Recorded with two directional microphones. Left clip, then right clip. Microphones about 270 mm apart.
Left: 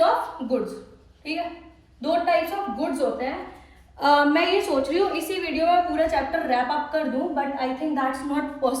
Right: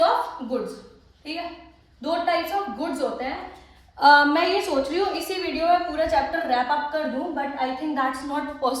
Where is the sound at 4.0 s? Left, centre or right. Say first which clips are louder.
Right 3 dB; centre.